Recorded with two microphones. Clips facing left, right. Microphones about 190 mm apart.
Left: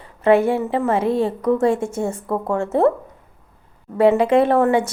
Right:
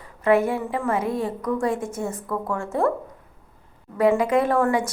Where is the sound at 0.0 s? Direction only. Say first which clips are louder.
Left 4 dB; 25° left (ahead or behind).